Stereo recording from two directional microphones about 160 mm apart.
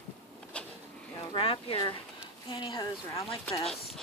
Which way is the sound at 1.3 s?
35° left (ahead or behind).